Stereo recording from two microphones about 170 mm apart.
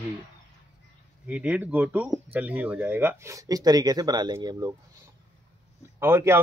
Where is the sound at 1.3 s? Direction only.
10° right (ahead or behind).